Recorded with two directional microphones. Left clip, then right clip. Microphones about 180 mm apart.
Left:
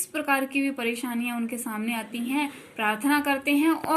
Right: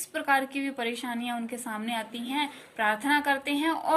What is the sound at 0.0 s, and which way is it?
A woman's voice, 25° right (ahead or behind).